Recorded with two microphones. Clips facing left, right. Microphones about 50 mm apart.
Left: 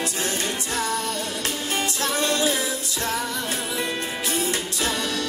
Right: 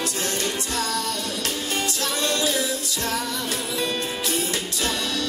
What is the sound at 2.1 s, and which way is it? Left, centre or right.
Music, left.